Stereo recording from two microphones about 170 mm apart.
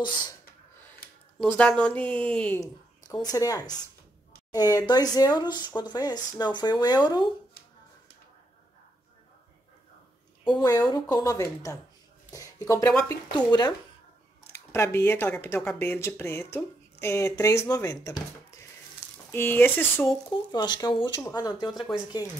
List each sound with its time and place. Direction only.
1.4 s speech: 5° left (ahead or behind)
2.6 s a woman's voice: 20° left (ahead or behind)
10.4 s speech: 25° left (ahead or behind)
19.3 s speech: 10° left (ahead or behind)
20.5 s speech: 25° left (ahead or behind)
21.7 s speech: centre (ahead or behind)